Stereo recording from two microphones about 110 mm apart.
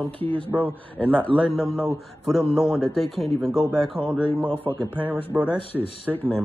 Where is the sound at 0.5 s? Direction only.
15° right (ahead or behind).